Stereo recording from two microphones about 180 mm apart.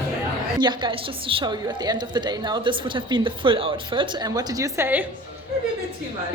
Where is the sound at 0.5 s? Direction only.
25° right (ahead or behind).